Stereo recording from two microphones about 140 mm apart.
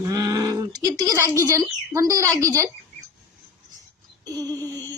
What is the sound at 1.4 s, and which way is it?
Speech, 20° right (ahead or behind).